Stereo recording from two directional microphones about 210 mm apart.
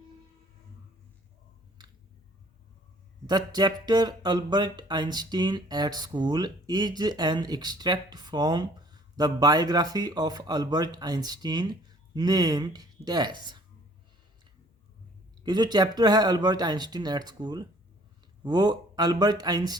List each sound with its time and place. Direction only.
1.8 s a sound: 20° right (ahead or behind)
3.2 s speech: 20° right (ahead or behind)
15.4 s speech: 20° right (ahead or behind)